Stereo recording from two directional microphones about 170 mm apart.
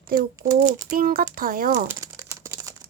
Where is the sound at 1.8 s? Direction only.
15° right (ahead or behind).